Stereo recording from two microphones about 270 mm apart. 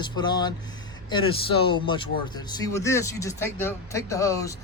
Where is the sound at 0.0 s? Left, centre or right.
Centre.